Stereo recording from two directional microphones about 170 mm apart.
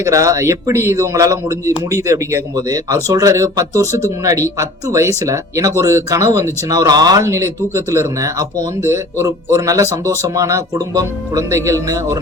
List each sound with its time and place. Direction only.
0.0 s a man's voice: 20° right (ahead or behind)